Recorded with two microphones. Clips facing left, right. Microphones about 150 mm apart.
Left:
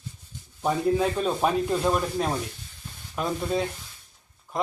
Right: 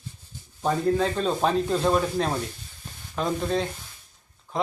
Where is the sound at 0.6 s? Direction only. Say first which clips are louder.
Even; 10° left (ahead or behind).